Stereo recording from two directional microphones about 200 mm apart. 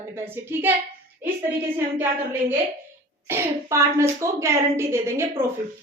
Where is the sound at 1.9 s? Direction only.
10° right (ahead or behind).